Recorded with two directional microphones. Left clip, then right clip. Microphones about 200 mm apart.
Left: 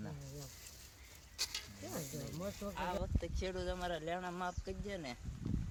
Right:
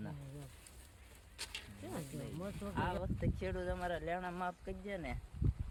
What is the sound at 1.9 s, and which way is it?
Speech, 35° left (ahead or behind).